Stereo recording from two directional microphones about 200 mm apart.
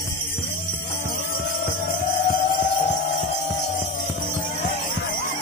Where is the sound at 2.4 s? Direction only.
25° left (ahead or behind).